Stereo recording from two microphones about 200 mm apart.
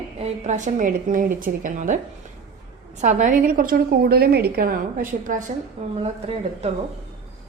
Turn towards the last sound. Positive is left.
turn(degrees=-30)  # may be behind; listen again after turning